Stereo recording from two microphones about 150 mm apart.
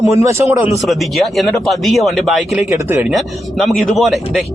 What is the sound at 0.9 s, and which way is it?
Speech, centre (ahead or behind).